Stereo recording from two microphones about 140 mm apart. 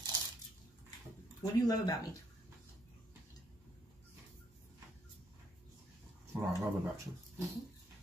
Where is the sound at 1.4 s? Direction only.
25° left (ahead or behind).